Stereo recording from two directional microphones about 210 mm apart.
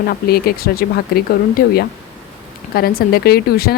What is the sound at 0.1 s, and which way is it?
Speech, 45° left (ahead or behind).